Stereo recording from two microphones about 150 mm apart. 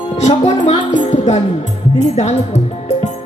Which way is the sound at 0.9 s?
50° left (ahead or behind).